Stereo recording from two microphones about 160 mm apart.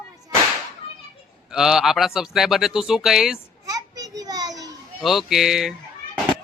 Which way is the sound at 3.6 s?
20° right (ahead or behind).